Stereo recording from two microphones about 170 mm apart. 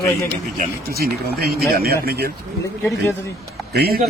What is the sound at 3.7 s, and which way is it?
Speech, 65° right (ahead or behind).